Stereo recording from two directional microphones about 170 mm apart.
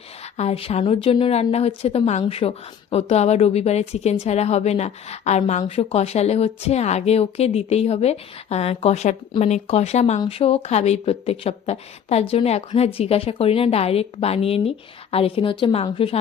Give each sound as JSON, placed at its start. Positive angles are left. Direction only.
{"t": 0.3, "sound": "a woman's voice", "side_deg": 35}